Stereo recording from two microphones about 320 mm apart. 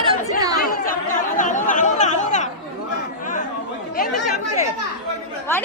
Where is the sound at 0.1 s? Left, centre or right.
Centre.